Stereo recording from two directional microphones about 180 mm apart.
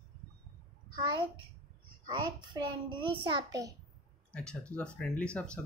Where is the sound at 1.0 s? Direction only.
25° right (ahead or behind).